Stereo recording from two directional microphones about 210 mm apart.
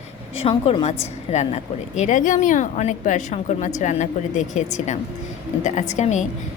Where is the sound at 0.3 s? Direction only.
25° left (ahead or behind).